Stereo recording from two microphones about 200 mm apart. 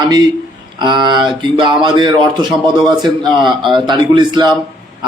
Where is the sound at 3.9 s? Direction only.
25° right (ahead or behind).